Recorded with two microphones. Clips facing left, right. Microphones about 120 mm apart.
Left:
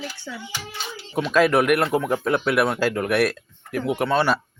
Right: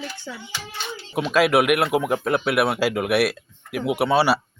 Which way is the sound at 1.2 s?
5° right (ahead or behind).